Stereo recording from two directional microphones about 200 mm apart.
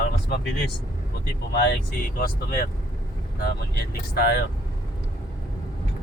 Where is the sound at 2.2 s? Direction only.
45° left (ahead or behind).